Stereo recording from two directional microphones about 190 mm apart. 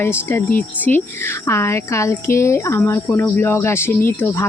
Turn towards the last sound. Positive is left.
turn(degrees=10)  # may be behind; listen again after turning